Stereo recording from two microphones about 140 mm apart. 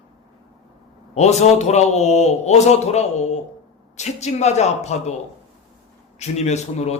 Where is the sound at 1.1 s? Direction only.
55° left (ahead or behind).